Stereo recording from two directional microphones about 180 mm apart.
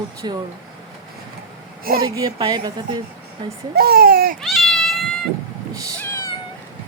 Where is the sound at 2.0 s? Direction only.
20° right (ahead or behind).